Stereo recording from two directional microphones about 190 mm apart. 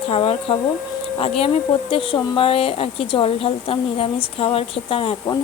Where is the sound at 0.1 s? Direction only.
30° left (ahead or behind).